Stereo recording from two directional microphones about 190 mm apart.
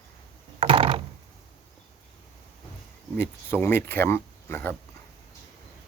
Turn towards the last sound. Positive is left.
turn(degrees=10)  # may be behind; listen again after turning